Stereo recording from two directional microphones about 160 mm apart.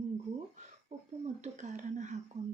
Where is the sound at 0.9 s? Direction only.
45° right (ahead or behind).